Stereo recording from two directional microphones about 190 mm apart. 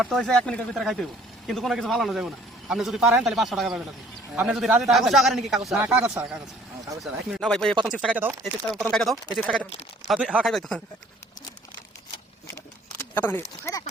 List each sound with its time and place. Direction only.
0.0 s a man's voice: centre (ahead or behind)
5.6 s a man's voice: 10° right (ahead or behind)
8.7 s a man's voice: centre (ahead or behind)
12.5 s a sound: 10° left (ahead or behind)